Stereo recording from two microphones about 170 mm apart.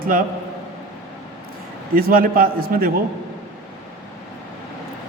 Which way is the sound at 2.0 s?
60° right (ahead or behind).